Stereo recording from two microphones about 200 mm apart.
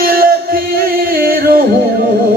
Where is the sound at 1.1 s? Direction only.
50° right (ahead or behind).